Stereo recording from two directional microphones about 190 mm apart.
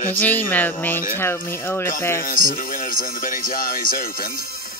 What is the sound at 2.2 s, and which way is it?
Speech, 45° left (ahead or behind).